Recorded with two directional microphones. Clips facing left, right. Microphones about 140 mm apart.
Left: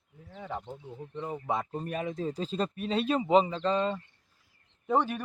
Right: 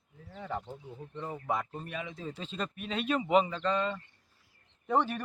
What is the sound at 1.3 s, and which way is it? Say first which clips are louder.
Speech: left 2 dB; 25° left (ahead or behind).